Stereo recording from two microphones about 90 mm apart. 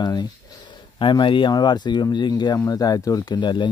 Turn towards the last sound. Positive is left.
turn(degrees=55)  # may be behind; listen again after turning